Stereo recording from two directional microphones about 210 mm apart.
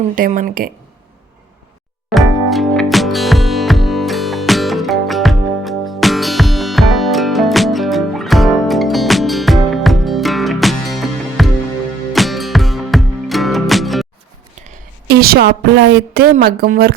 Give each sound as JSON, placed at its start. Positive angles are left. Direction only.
{"t": 0.2, "sound": "speech", "side_deg": -40}
{"t": 2.0, "sound": "music", "side_deg": 0}
{"t": 15.0, "sound": "a woman's voice", "side_deg": -50}